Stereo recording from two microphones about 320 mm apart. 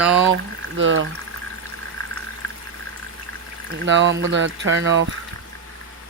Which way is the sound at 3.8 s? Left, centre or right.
Right.